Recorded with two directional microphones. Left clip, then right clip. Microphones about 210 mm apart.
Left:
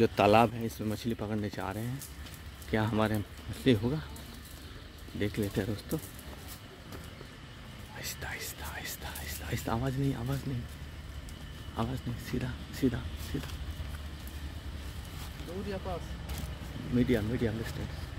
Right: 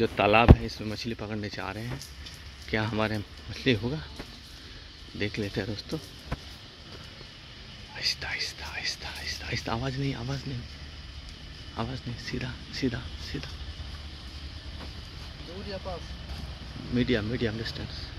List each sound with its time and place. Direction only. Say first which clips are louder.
0.0 s speech: right 2 dB; 15° left (ahead or behind); by 4.0 s centre (ahead or behind)
5.2 s speech: right 2 dB; centre (ahead or behind)
8.0 s speech: right 10 dB; 5° right (ahead or behind)
11.7 s speech: right 1 dB; centre (ahead or behind)
16.9 s speech: right 2 dB; 15° right (ahead or behind)